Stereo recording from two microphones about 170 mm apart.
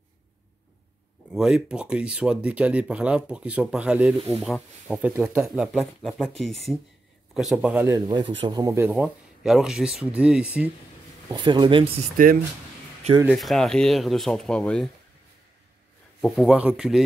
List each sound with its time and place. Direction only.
1.3 s speech: centre (ahead or behind)
8.1 s speech: 30° right (ahead or behind)
8.9 s speech: 5° right (ahead or behind)
11.2 s speech: 25° right (ahead or behind)
13.3 s speech: centre (ahead or behind)
16.2 s speech: centre (ahead or behind)